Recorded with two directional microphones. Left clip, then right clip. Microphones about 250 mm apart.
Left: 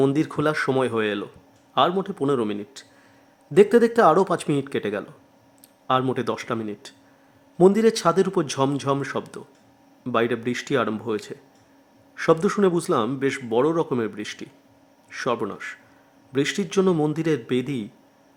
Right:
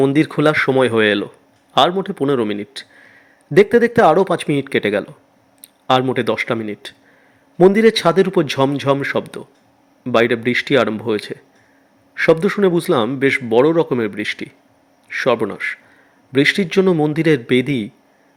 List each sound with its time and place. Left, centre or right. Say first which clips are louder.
0.1 s a man's voice: right 8 dB; centre